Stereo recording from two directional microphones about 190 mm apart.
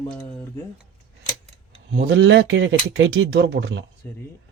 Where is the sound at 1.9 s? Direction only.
70° right (ahead or behind).